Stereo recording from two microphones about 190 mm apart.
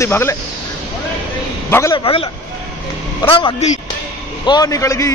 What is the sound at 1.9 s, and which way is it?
Speech, 30° left (ahead or behind).